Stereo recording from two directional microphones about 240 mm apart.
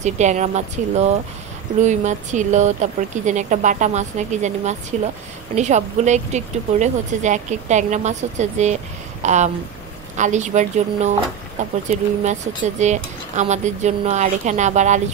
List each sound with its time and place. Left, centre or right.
0.0 s speech: right